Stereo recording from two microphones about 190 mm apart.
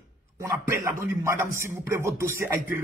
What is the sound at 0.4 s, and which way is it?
A man's voice, 15° right (ahead or behind).